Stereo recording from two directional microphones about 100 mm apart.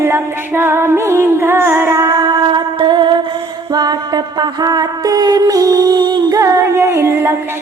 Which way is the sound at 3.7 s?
45° right (ahead or behind).